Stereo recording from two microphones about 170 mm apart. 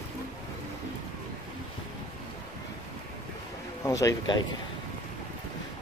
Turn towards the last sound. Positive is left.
turn(degrees=25)  # may be behind; listen again after turning